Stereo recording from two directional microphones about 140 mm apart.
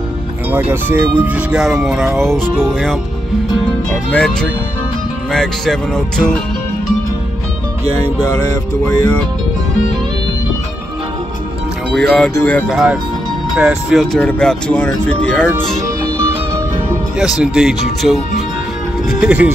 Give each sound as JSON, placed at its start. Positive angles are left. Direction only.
{"t": 0.5, "sound": "speech", "side_deg": -15}
{"t": 3.6, "sound": "speech", "side_deg": 5}
{"t": 11.9, "sound": "speech", "side_deg": 0}
{"t": 12.6, "sound": "speech", "side_deg": -5}
{"t": 17.2, "sound": "speech", "side_deg": -5}